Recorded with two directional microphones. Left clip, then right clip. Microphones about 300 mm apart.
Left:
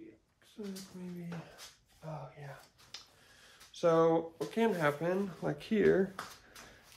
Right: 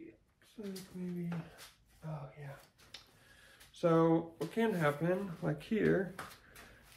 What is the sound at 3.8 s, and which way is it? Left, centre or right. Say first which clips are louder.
Speech: left 2 dB; left.